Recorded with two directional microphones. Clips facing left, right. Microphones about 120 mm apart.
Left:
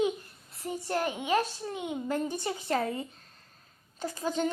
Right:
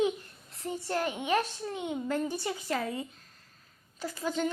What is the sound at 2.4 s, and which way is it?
A child's voice, 30° left (ahead or behind).